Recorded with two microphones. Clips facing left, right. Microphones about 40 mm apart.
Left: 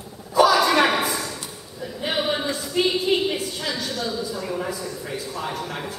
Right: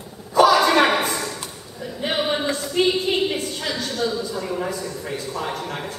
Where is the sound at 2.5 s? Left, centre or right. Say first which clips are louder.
Right 2 dB; centre.